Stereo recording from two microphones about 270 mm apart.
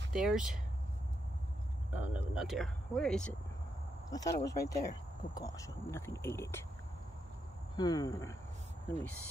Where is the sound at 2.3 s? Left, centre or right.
Centre.